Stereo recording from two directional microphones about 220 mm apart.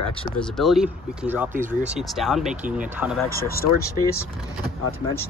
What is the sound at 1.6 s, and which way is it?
Speech, 30° right (ahead or behind).